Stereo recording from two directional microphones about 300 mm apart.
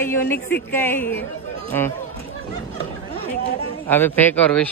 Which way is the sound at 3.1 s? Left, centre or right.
Right.